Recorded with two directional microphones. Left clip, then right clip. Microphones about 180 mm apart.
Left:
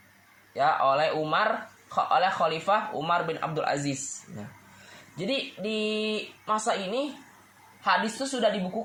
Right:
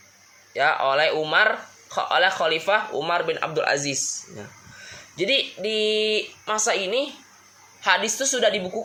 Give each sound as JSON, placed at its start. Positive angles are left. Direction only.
{"t": 0.5, "sound": "speech", "side_deg": -30}
{"t": 5.1, "sound": "speech", "side_deg": -35}